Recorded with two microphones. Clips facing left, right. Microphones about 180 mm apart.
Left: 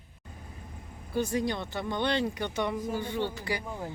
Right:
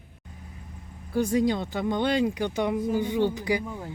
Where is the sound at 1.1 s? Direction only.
15° right (ahead or behind).